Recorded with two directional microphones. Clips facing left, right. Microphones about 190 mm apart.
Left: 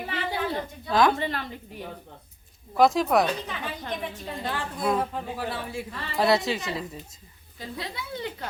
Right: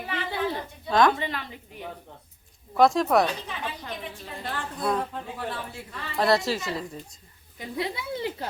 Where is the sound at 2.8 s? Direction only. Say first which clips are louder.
Even; centre (ahead or behind).